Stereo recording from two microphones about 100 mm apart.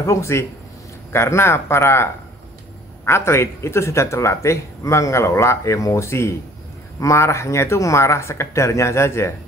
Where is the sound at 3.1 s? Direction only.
25° left (ahead or behind).